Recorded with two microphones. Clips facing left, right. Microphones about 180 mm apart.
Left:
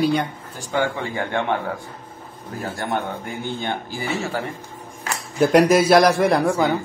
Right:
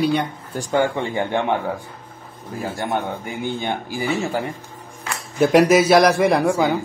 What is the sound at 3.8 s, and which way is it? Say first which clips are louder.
Speech: right 3 dB; 15° right (ahead or behind).